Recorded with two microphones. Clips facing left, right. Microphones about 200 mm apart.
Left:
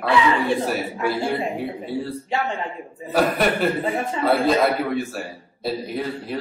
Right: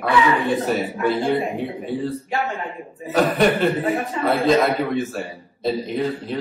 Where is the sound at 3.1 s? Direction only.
5° left (ahead or behind).